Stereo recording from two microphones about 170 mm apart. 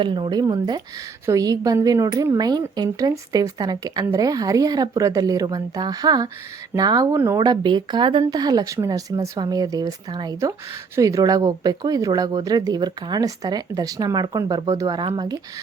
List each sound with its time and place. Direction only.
0.0 s speech: 30° right (ahead or behind)